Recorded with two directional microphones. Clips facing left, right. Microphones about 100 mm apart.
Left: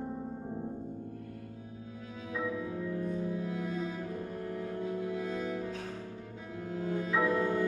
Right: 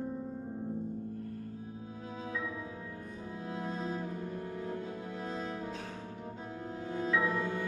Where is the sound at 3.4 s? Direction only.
30° right (ahead or behind).